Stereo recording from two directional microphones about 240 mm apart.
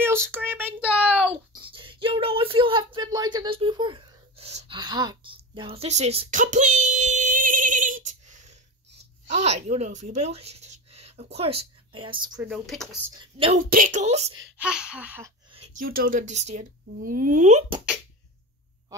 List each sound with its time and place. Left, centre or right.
0.0 s a sound: centre
1.5 s a sound: right
9.3 s speech: right
12.4 s speech: centre
13.2 s a woman's voice: right
13.7 s a woman's voice: right
14.6 s speech: centre
15.8 s speech: right